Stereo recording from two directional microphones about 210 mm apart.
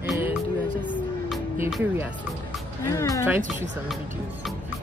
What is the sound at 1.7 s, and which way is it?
Speech, 10° right (ahead or behind).